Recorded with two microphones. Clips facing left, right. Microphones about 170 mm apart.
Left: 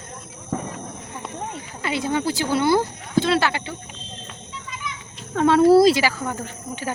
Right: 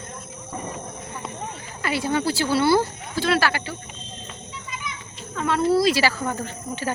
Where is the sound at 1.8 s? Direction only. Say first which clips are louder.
Even; 20° left (ahead or behind).